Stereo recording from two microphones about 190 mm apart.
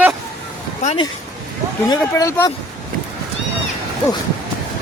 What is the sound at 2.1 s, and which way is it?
Speech, 15° left (ahead or behind).